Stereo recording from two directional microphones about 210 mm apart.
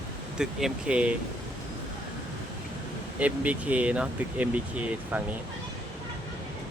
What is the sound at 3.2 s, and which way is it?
Speech, 5° right (ahead or behind).